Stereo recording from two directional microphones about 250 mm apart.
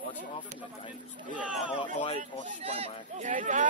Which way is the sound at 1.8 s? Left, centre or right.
Centre.